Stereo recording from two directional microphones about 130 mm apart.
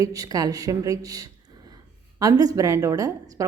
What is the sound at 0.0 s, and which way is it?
A woman's voice, 25° right (ahead or behind).